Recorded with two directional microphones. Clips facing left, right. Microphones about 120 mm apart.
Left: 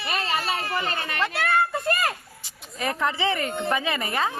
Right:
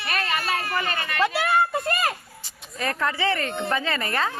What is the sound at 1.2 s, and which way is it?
Speech, 5° right (ahead or behind).